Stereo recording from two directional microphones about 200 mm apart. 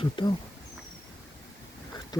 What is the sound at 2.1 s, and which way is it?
Speech, 20° left (ahead or behind).